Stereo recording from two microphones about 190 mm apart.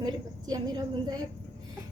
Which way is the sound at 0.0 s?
20° right (ahead or behind).